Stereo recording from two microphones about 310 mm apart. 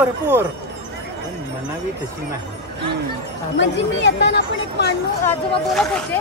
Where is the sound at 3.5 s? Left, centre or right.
Left.